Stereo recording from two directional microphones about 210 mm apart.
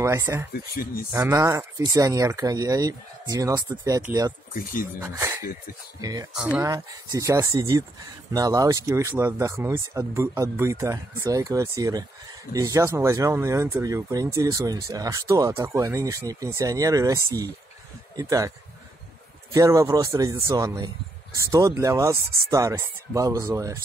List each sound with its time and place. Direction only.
0.0 s speech: 15° right (ahead or behind)
0.5 s speech: 45° left (ahead or behind)
1.1 s speech: 15° right (ahead or behind)
19.5 s speech: 15° right (ahead or behind)